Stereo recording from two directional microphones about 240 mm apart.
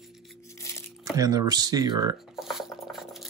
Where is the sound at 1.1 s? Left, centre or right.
Centre.